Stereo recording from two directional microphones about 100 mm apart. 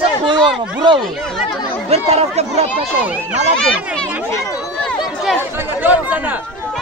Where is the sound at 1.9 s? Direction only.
90° right.